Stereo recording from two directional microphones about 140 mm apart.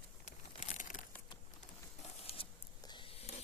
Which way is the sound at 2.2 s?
45° left (ahead or behind).